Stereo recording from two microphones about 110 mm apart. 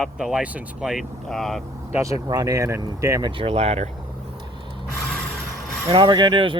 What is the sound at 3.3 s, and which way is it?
Speech, 65° right (ahead or behind).